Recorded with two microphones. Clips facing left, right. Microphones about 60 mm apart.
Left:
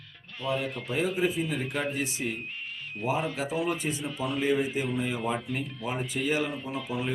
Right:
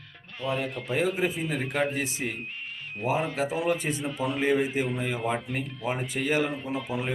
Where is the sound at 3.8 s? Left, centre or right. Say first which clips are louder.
Right 1 dB; right.